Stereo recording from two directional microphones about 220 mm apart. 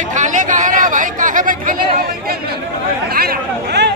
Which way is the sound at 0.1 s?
35° right (ahead or behind).